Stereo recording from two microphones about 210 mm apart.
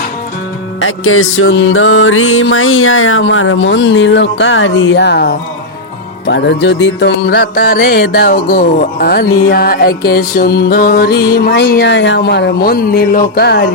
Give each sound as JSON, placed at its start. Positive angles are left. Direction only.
{"t": 0.8, "sound": "music", "side_deg": 75}